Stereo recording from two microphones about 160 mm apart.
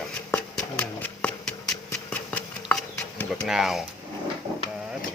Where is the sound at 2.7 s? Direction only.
5° left (ahead or behind).